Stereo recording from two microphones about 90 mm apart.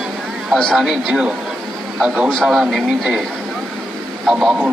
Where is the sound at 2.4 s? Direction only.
5° right (ahead or behind).